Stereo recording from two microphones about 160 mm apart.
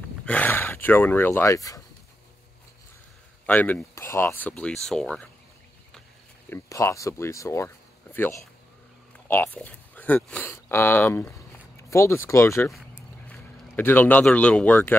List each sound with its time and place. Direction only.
0.2 s speech: 10° left (ahead or behind)
3.4 s speech: 10° left (ahead or behind)
6.5 s speech: 20° left (ahead or behind)
12.6 s a sound: centre (ahead or behind)
13.7 s speech: 10° left (ahead or behind)